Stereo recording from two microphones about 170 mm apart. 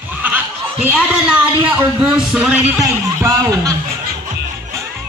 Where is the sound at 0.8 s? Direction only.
10° right (ahead or behind).